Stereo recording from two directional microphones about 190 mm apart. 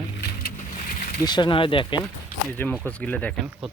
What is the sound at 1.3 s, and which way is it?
Speech, 25° left (ahead or behind).